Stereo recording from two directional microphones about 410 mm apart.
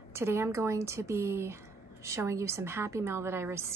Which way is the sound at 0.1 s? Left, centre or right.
Centre.